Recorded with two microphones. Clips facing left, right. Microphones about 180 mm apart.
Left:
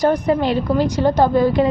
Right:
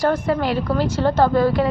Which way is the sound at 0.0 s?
20° left (ahead or behind).